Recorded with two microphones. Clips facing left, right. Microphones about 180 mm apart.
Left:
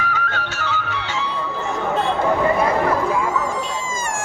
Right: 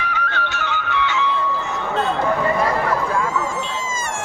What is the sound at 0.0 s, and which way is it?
Music, 45° left (ahead or behind).